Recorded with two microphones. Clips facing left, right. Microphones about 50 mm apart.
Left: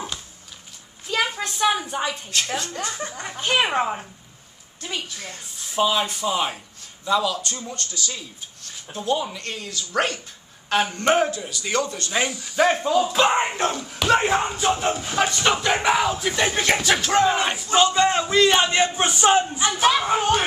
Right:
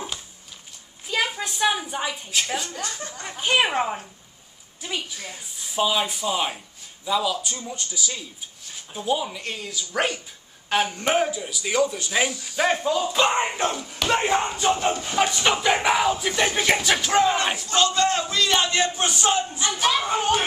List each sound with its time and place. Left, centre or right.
1.0 s a woman's voice: centre
2.8 s a man's voice: left
3.3 s speech: centre
17.6 s a man's voice: centre
19.8 s speech: centre